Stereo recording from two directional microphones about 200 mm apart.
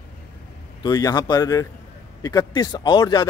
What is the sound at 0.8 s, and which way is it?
A man's voice, 20° left (ahead or behind).